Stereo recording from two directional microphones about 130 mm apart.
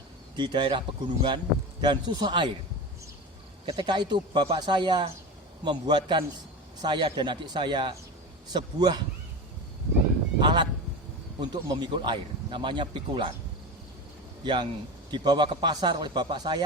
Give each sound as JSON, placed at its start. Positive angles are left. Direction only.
{"t": 0.3, "sound": "speech", "side_deg": -35}
{"t": 3.8, "sound": "speech", "side_deg": -35}
{"t": 10.4, "sound": "speech", "side_deg": -35}
{"t": 14.4, "sound": "speech", "side_deg": -35}